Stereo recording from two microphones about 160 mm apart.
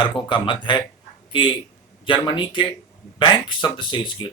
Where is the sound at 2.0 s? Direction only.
30° left (ahead or behind).